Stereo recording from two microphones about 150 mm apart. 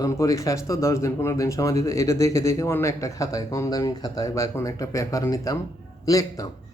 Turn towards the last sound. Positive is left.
turn(degrees=25)  # may be behind; listen again after turning